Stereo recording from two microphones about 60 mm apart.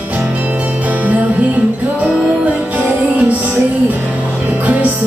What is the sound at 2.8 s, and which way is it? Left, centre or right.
Music, right.